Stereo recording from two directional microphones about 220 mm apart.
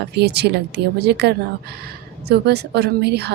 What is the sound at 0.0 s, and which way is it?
A woman's voice, 50° right (ahead or behind).